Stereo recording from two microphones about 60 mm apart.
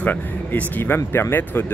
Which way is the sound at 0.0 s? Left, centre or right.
Left.